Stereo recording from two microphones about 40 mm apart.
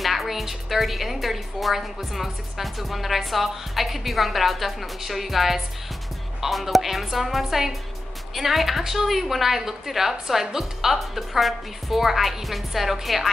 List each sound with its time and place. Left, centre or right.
0.0 s a woman's voice: centre